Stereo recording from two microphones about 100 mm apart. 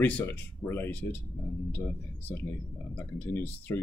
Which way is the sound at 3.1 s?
20° left (ahead or behind).